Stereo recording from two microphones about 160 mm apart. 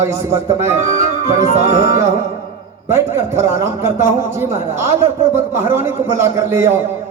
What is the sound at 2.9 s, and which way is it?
A man's voice, 15° right (ahead or behind).